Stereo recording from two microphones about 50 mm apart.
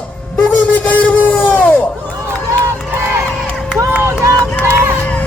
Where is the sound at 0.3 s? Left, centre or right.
Left.